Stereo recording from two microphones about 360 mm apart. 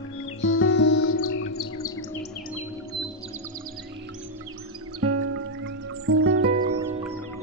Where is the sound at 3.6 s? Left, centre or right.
Right.